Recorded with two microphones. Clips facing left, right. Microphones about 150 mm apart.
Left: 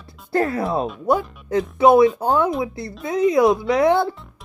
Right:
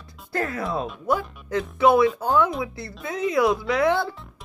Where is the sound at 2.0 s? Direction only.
25° left (ahead or behind).